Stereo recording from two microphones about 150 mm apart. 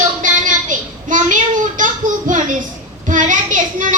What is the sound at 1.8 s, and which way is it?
Child singing, 60° right (ahead or behind).